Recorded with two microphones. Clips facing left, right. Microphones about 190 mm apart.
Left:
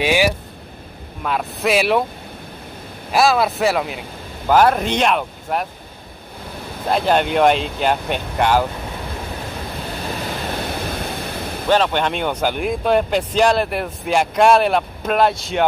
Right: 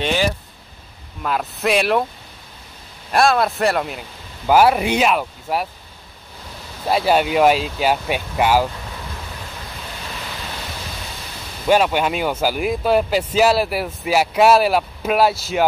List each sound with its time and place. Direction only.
0.0 s speech: 10° left (ahead or behind)
3.1 s speech: centre (ahead or behind)
6.9 s speech: 5° right (ahead or behind)
10.2 s pink noise: 50° left (ahead or behind)
11.7 s speech: 10° right (ahead or behind)